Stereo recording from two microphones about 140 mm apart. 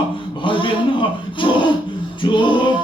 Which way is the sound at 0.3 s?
35° left (ahead or behind).